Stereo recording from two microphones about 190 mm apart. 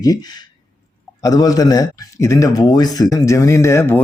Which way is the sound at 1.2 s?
20° left (ahead or behind).